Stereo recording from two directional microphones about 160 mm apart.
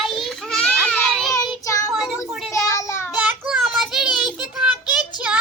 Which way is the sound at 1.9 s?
5° right (ahead or behind).